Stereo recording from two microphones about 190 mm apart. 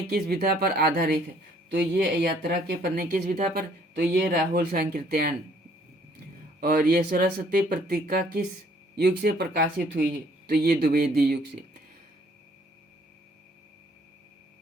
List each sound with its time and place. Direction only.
0.1 s speech: 55° right (ahead or behind)
6.6 s speech: 50° right (ahead or behind)